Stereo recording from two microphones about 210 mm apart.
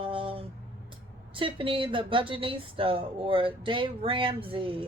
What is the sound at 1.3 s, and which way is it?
Speech, 25° right (ahead or behind).